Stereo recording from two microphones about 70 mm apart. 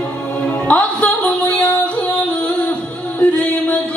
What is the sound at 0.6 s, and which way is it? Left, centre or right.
Music, centre.